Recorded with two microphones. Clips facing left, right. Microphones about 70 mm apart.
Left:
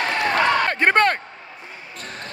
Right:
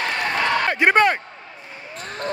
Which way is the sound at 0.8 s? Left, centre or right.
Centre.